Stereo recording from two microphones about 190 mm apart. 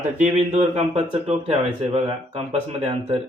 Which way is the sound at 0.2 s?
35° right (ahead or behind).